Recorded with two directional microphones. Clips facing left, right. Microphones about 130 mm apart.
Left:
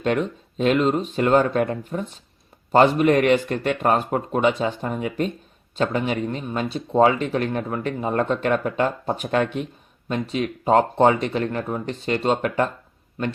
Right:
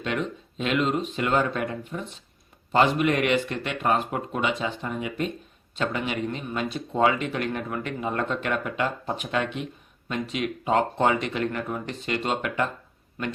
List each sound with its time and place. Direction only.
0.0 s speech: 40° left (ahead or behind)